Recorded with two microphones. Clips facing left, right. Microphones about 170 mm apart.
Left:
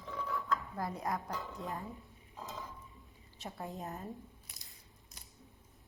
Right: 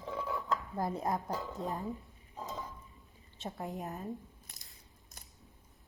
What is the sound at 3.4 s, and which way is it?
Speech, 20° right (ahead or behind).